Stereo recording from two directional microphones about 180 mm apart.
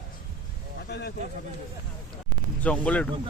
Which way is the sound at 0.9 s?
65° left (ahead or behind).